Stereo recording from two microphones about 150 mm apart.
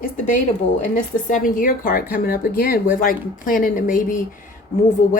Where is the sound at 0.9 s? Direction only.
65° left (ahead or behind).